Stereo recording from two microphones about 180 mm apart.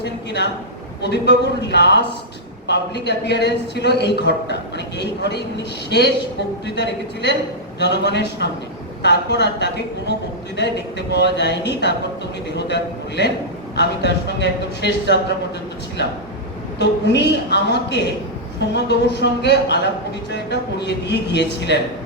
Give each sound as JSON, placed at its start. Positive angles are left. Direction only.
{"t": 0.0, "sound": "a sound", "side_deg": 70}
{"t": 1.0, "sound": "a man's voice", "side_deg": 70}
{"t": 16.7, "sound": "a man's voice", "side_deg": 70}